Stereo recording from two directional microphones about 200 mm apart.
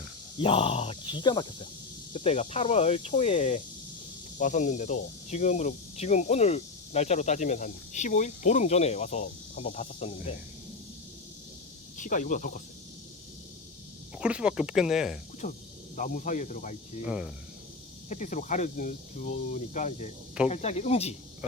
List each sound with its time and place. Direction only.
0.3 s speech: 25° left (ahead or behind)
11.9 s speech: 40° left (ahead or behind)
14.2 s speech: 5° right (ahead or behind)
15.4 s speech: 45° left (ahead or behind)
17.1 s speech: 5° right (ahead or behind)
18.1 s speech: 35° left (ahead or behind)